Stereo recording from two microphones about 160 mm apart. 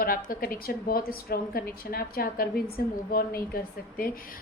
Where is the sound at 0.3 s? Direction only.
65° left (ahead or behind).